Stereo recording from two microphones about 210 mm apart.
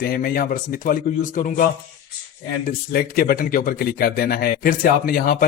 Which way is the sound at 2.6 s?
45° left (ahead or behind).